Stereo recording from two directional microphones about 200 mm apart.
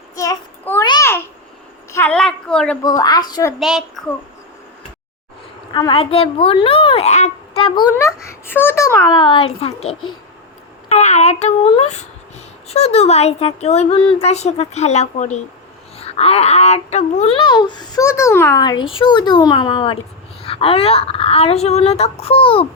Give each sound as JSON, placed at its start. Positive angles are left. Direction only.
{"t": 0.2, "sound": "child singing", "side_deg": 15}
{"t": 0.9, "sound": "babbling", "side_deg": 15}
{"t": 1.9, "sound": "a sound", "side_deg": 10}
{"t": 2.8, "sound": "speech", "side_deg": 20}
{"t": 3.6, "sound": "a woman's voice", "side_deg": 0}
{"t": 5.7, "sound": "speech", "side_deg": 25}
{"t": 7.9, "sound": "a child's voice", "side_deg": 15}
{"t": 9.1, "sound": "speech", "side_deg": 25}